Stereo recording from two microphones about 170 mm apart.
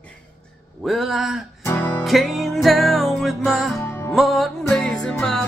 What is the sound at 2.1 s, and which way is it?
Music, centre (ahead or behind).